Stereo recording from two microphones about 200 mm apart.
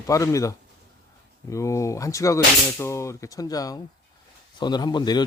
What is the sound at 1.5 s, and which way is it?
Speech, 15° left (ahead or behind).